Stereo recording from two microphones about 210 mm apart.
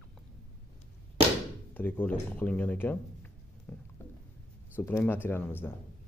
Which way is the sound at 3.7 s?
5° left (ahead or behind).